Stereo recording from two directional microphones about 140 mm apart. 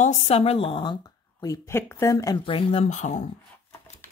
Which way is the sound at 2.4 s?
40° left (ahead or behind).